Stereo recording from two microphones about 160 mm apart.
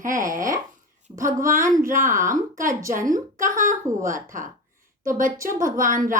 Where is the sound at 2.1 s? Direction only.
20° right (ahead or behind).